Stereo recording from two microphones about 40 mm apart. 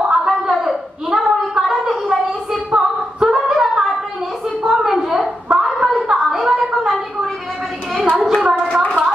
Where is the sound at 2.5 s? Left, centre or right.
Centre.